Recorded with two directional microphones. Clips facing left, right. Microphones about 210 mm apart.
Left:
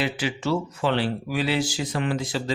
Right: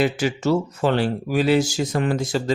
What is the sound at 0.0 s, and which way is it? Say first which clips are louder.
Speech: right 6 dB; 45° right (ahead or behind).